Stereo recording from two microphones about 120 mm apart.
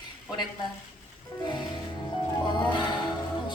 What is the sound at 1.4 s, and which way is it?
Music, 40° left (ahead or behind).